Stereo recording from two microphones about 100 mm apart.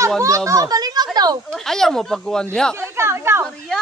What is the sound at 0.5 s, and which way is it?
Children playing, 35° right (ahead or behind).